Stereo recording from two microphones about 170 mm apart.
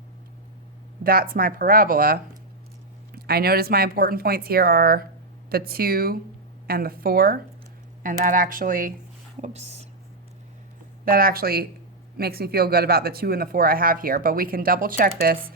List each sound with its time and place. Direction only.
1.0 s speech: 60° right (ahead or behind)
9.4 s speech: 40° right (ahead or behind)
11.0 s speech: 60° right (ahead or behind)